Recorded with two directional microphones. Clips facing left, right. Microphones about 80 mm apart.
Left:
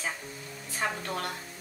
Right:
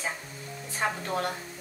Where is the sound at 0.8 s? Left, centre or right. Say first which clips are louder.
Right 2 dB; right.